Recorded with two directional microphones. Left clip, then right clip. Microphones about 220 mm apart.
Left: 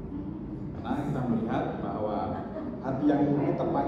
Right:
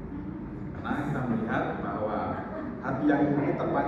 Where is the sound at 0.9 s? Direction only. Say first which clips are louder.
Even; centre (ahead or behind).